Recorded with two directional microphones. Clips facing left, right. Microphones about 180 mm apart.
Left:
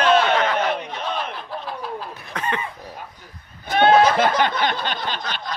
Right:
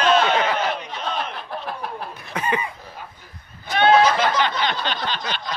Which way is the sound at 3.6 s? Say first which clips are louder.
Left 1 dB; 50° left (ahead or behind).